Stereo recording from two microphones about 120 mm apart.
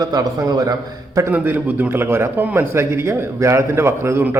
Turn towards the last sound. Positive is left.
turn(degrees=-20)  # may be behind; listen again after turning